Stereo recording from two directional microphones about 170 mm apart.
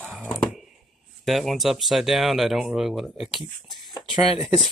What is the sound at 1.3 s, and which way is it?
Speech, centre (ahead or behind).